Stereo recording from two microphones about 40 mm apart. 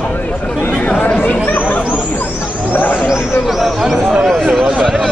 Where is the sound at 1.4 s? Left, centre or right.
Left.